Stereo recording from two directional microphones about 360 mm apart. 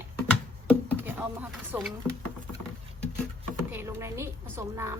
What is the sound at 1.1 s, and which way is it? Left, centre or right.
Speech, centre.